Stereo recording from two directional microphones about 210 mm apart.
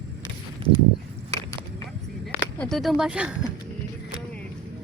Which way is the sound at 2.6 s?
Centre (ahead or behind).